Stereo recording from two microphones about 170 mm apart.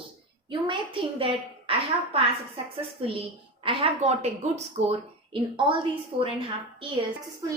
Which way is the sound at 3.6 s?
30° right (ahead or behind).